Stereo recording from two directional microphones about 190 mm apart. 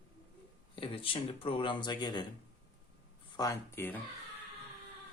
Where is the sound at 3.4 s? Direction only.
15° left (ahead or behind).